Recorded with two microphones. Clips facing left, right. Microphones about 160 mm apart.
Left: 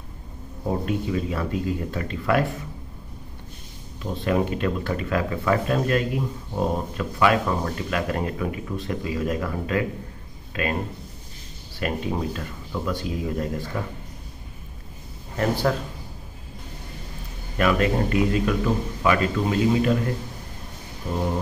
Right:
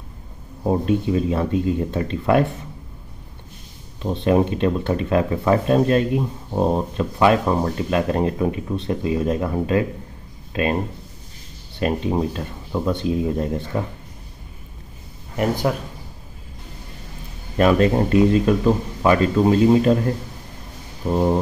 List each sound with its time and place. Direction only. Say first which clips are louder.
0.7 s speech: right 6 dB; 25° right (ahead or behind)
4.0 s speech: right 5 dB; 25° right (ahead or behind)
11.8 s speech: right 5 dB; 25° right (ahead or behind)
15.3 s speech: right 2 dB; 15° right (ahead or behind)
17.6 s speech: right 5 dB; 30° right (ahead or behind)
21.1 s speech: right 7 dB; 35° right (ahead or behind)